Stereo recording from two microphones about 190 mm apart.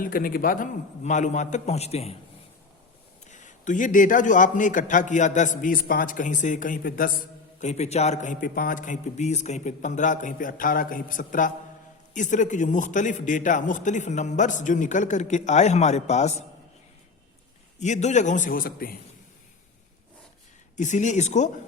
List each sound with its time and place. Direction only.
0.0 s a man's voice: 50° left (ahead or behind); by 2.1 s 35° left (ahead or behind)
3.2 s a man's voice: 40° left (ahead or behind)
7.6 s a man's voice: 35° left (ahead or behind)
17.7 s a man's voice: 40° left (ahead or behind)
20.7 s a man's voice: 40° left (ahead or behind)